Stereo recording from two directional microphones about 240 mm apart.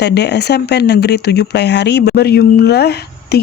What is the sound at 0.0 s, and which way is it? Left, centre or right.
Speech, left.